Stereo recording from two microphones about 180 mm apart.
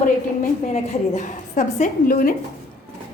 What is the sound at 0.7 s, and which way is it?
A woman's voice, 45° left (ahead or behind).